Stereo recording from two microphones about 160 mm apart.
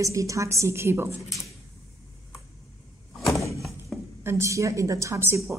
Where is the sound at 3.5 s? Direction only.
Centre (ahead or behind).